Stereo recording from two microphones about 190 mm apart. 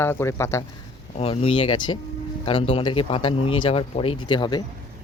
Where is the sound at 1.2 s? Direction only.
30° left (ahead or behind).